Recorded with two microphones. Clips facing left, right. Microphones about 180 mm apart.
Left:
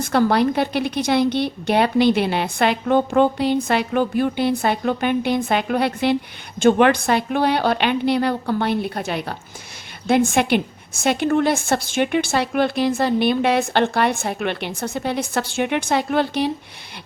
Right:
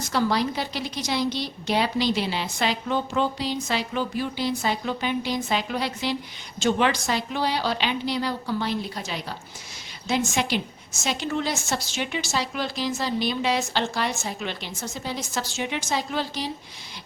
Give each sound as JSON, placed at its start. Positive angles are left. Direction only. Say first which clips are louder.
{"t": 0.0, "sound": "a woman's voice", "louder": "left 7 dB", "side_deg": 55}